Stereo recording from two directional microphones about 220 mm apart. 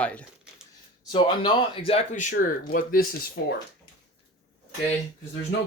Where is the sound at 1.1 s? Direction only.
20° left (ahead or behind); by 3.2 s 40° left (ahead or behind).